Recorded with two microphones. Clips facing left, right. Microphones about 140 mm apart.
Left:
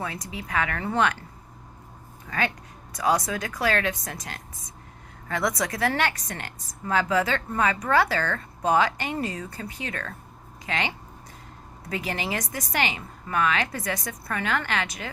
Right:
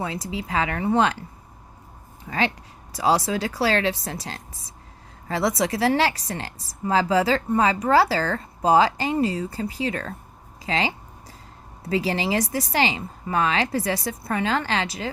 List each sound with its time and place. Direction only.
0.0 s a woman's voice: 25° right (ahead or behind)
2.3 s a woman's voice: 25° right (ahead or behind)